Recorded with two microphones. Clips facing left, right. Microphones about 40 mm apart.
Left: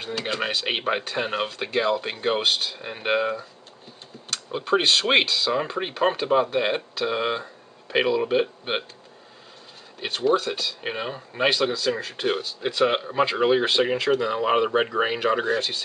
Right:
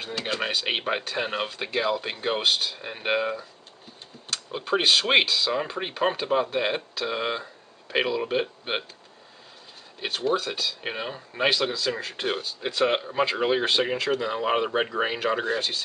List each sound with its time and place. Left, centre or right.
0.0 s speech: centre
9.9 s speech: centre